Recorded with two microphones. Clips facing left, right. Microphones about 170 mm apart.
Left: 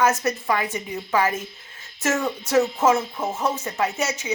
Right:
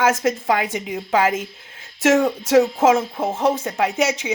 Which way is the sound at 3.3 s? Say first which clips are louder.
Right 5 dB; 60° right (ahead or behind).